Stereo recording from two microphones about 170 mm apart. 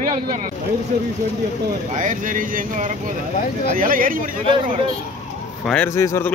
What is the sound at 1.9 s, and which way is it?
Speech, 50° right (ahead or behind).